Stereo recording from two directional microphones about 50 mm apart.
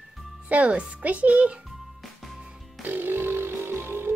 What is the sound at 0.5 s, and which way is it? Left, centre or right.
A child's voice, right.